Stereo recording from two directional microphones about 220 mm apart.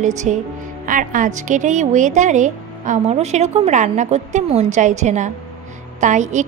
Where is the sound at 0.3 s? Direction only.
30° right (ahead or behind).